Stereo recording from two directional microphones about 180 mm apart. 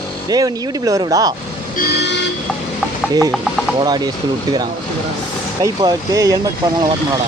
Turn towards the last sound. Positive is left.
turn(degrees=-20)  # may be behind; listen again after turning